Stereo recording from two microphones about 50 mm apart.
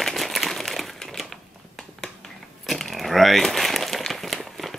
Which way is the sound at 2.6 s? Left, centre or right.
Centre.